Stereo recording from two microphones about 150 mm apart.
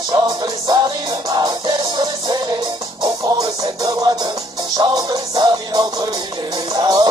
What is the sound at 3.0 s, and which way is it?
Music, 25° right (ahead or behind).